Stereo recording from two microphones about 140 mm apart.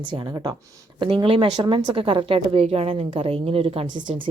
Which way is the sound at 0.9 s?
40° right (ahead or behind).